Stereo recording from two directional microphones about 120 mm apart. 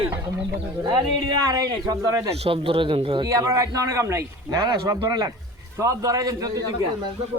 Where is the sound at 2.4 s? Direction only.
50° right (ahead or behind).